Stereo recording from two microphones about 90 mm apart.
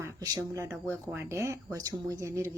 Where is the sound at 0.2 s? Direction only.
40° right (ahead or behind).